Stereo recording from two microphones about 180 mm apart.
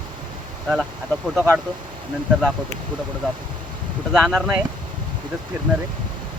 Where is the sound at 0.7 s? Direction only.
Centre (ahead or behind).